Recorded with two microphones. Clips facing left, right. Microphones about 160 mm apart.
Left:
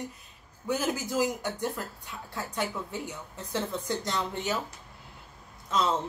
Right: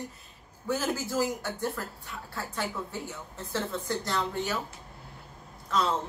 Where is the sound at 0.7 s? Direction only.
15° left (ahead or behind).